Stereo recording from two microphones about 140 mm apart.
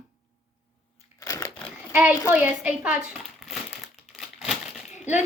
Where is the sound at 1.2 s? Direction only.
20° left (ahead or behind).